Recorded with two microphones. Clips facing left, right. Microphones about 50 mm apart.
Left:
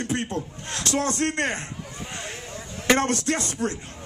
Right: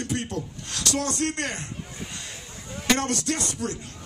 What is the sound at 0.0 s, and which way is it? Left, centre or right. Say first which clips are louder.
A man's voice: left 2 dB; left.